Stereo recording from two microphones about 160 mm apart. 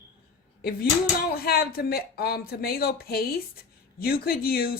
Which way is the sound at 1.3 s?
70° left (ahead or behind).